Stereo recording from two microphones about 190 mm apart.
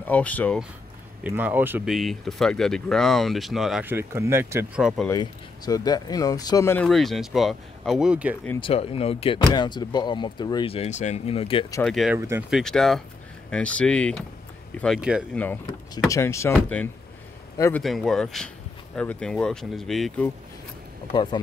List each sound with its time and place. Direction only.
0.0 s speech: 10° left (ahead or behind)
1.2 s speech: 10° right (ahead or behind)
2.0 s speech: centre (ahead or behind)
5.0 s speech: 20° left (ahead or behind)
6.9 s speech: centre (ahead or behind)
8.5 s speech: 30° left (ahead or behind)
11.8 s speech: centre (ahead or behind)
12.2 s speech: 15° right (ahead or behind)
12.4 s speech: centre (ahead or behind)
15.0 s speech: 5° right (ahead or behind)
15.3 s speech: 10° left (ahead or behind)
17.8 s speech: centre (ahead or behind)
21.1 s speech: 25° left (ahead or behind)